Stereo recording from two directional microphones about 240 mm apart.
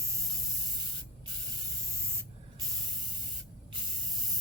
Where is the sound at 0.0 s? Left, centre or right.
Centre.